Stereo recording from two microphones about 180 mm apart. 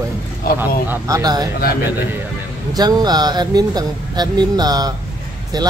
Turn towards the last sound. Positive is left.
turn(degrees=-25)  # may be behind; listen again after turning